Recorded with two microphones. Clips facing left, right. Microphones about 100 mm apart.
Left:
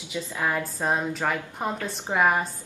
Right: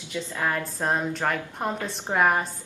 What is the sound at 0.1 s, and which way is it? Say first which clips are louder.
A woman's voice: even; 10° left (ahead or behind).